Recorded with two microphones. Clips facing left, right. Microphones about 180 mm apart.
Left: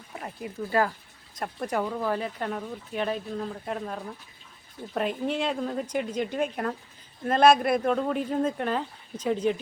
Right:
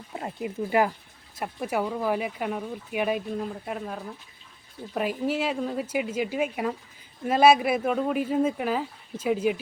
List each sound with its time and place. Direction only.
0.2 s speech: 20° right (ahead or behind)